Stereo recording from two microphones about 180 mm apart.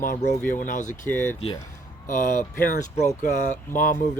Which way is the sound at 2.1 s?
45° left (ahead or behind).